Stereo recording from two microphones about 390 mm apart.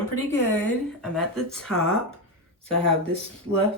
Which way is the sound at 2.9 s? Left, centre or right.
Centre.